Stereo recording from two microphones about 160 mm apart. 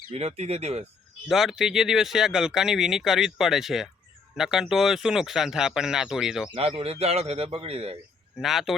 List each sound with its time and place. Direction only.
0.1 s a man's voice: 40° right (ahead or behind)
1.3 s speech: centre (ahead or behind)
6.5 s a man's voice: 35° right (ahead or behind)
8.4 s speech: centre (ahead or behind)